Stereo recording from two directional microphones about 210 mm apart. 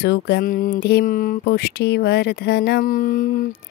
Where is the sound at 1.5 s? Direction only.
50° left (ahead or behind).